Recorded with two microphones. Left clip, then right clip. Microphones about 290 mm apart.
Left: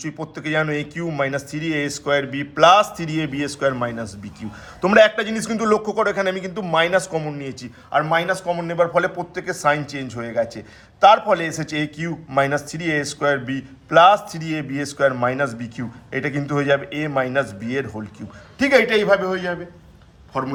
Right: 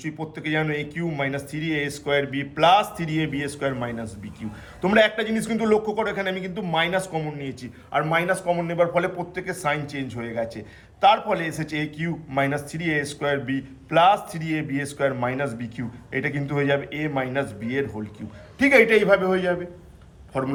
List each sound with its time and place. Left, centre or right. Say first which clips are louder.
0.0 s a man's voice: left 2 dB; centre